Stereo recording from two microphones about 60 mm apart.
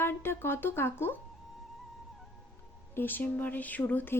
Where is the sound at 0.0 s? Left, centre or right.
Left.